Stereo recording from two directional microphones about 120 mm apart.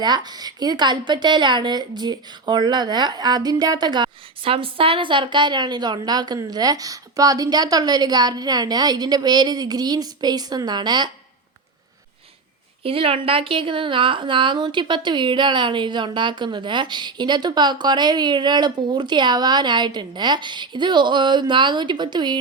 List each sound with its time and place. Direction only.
0.0 s a woman's voice: 35° right (ahead or behind)
12.8 s a woman's voice: 50° right (ahead or behind)